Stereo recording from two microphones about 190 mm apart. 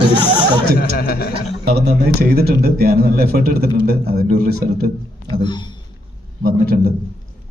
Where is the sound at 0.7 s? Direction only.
50° left (ahead or behind).